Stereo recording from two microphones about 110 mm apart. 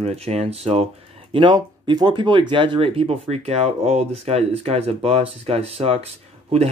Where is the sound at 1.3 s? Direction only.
45° right (ahead or behind).